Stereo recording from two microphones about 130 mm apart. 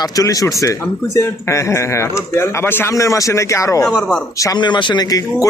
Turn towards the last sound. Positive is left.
turn(degrees=30)  # may be behind; listen again after turning